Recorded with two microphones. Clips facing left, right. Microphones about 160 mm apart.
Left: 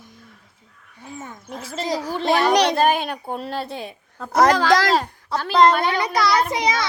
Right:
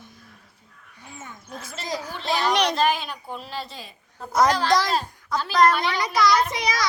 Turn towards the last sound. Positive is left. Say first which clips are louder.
# left 3 dB
turn(degrees=25)  # may be behind; listen again after turning